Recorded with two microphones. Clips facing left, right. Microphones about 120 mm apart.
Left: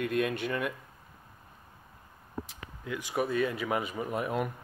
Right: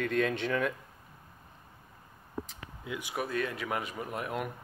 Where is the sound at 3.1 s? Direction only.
Centre (ahead or behind).